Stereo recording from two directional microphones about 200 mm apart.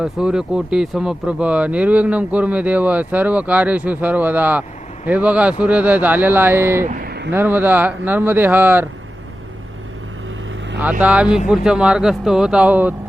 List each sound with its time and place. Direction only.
0.0 s speech: 5° right (ahead or behind)
6.8 s a sound: 50° right (ahead or behind)
7.3 s speech: 10° right (ahead or behind)
11.0 s speech: 5° right (ahead or behind)